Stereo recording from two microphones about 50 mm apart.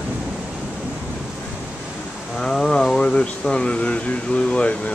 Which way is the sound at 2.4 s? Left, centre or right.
Centre.